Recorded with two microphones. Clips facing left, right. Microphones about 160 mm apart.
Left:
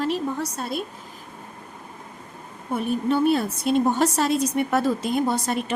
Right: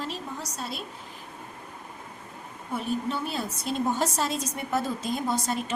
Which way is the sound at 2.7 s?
60° left (ahead or behind).